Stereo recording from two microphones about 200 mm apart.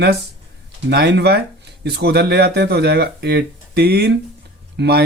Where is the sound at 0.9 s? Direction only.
55° right (ahead or behind).